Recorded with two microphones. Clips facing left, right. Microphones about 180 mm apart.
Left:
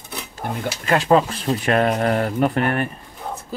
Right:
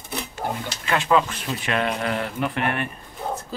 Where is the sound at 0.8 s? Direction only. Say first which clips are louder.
Left 4 dB; 40° left (ahead or behind).